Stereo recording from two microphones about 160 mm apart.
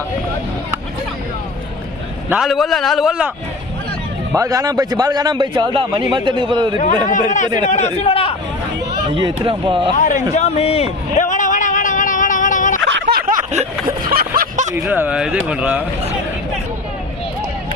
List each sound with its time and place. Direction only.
2.3 s a man's voice: centre (ahead or behind)
4.4 s a man's voice: 20° right (ahead or behind)
7.3 s a man's voice: 50° left (ahead or behind)
9.0 s speech: 30° right (ahead or behind)
10.0 s a man's voice: 55° left (ahead or behind)
10.3 s a sound: 40° left (ahead or behind)
12.9 s a sound: 75° right (ahead or behind)
14.1 s a sound: 65° right (ahead or behind)
14.8 s speech: 10° right (ahead or behind)